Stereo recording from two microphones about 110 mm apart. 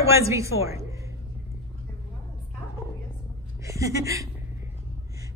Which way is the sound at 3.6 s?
30° right (ahead or behind).